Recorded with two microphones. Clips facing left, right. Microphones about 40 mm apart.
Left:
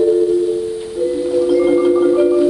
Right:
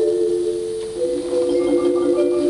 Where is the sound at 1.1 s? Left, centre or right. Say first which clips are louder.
Left 5 dB; centre.